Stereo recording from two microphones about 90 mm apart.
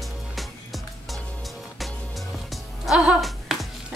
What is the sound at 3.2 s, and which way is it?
Music, centre (ahead or behind).